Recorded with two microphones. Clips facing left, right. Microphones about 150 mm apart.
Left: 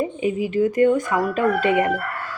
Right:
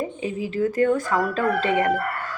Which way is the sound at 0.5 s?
15° left (ahead or behind).